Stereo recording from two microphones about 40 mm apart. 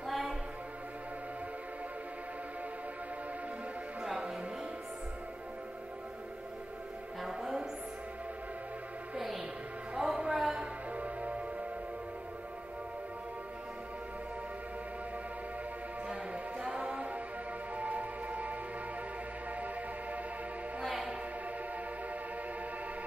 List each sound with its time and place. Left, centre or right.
0.0 s music: centre
4.0 s music: centre
7.2 s music: centre
9.9 s music: centre
10.6 s music: right
16.1 s music: right
20.8 s music: centre